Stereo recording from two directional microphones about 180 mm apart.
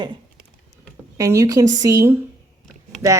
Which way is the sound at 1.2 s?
20° right (ahead or behind).